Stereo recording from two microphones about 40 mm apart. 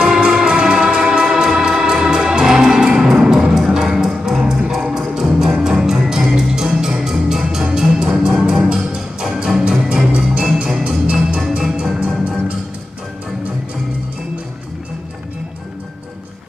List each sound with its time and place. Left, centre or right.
0.0 s music: centre
10.4 s music: centre
11.1 s music: right
11.3 s music: centre
11.7 s music: right